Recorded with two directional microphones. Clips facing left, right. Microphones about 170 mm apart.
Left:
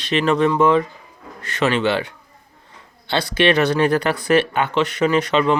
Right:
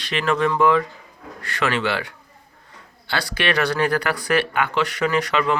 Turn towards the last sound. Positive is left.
turn(degrees=25)  # may be behind; listen again after turning